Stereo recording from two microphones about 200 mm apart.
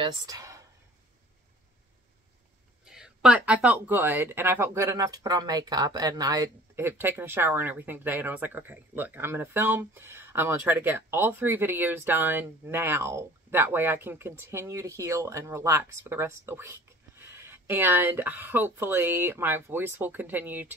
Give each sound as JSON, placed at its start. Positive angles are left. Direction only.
{"t": 0.0, "sound": "speech", "side_deg": -15}
{"t": 2.8, "sound": "speech", "side_deg": -5}